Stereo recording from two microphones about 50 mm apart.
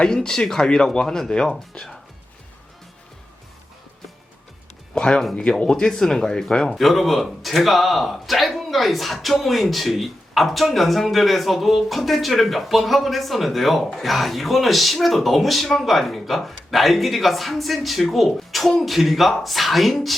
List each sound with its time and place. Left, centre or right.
0.0 s speech: centre
4.9 s speech: centre
6.7 s speech: centre